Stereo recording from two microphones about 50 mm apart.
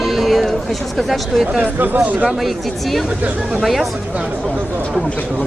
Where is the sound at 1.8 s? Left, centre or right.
Right.